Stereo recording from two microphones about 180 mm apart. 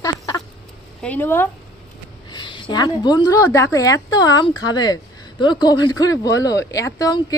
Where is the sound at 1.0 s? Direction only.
10° left (ahead or behind).